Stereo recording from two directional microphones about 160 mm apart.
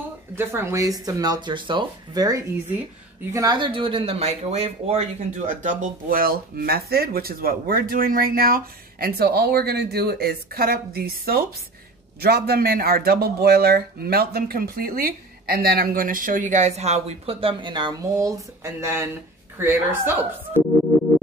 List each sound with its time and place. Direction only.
0.4 s a woman's voice: 15° right (ahead or behind)